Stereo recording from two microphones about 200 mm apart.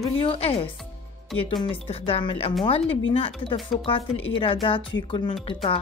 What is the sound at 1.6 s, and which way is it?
Speech, 30° left (ahead or behind).